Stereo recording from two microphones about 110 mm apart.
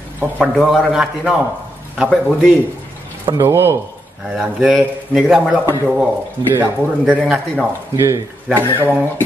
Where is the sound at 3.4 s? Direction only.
20° right (ahead or behind).